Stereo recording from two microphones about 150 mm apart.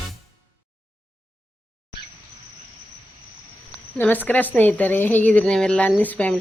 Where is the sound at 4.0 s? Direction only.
10° left (ahead or behind).